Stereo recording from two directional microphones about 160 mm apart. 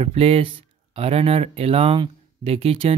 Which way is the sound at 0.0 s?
40° right (ahead or behind).